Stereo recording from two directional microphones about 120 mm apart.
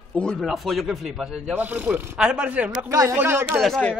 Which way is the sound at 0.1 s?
5° left (ahead or behind).